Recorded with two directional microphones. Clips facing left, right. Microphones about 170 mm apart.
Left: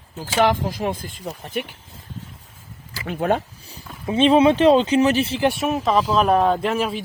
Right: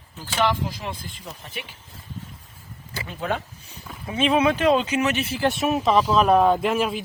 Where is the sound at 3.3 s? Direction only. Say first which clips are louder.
Left 6 dB; 35° left (ahead or behind).